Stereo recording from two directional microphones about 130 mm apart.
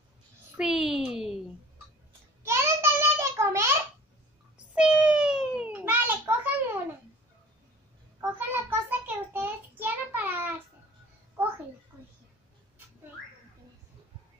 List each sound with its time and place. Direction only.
0.6 s a child's voice: 5° right (ahead or behind)
2.4 s child singing: 20° right (ahead or behind)
4.7 s a sound: 10° right (ahead or behind)
8.2 s child singing: 15° right (ahead or behind)